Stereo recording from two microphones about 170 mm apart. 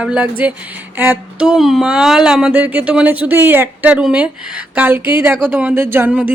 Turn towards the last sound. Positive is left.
turn(degrees=-10)  # may be behind; listen again after turning